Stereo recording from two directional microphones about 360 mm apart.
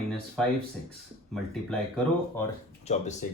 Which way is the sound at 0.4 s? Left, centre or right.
Centre.